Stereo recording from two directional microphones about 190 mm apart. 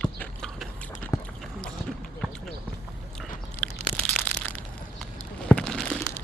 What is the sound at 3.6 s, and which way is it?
Crunch, 5° left (ahead or behind).